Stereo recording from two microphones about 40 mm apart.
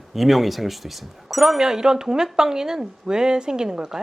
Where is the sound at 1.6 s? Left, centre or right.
Centre.